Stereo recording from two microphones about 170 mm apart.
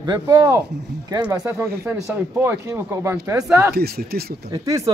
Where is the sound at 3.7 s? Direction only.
65° right (ahead or behind).